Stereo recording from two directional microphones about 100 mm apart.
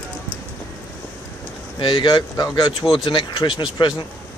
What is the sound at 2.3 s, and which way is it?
Speech, 45° left (ahead or behind).